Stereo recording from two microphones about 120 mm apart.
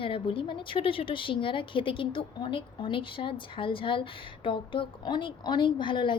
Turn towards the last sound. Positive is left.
turn(degrees=40)  # may be behind; listen again after turning